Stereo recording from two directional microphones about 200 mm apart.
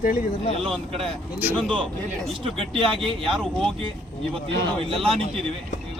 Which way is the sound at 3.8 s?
25° right (ahead or behind).